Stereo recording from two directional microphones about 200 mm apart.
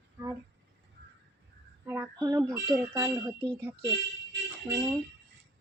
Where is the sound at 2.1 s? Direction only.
20° right (ahead or behind).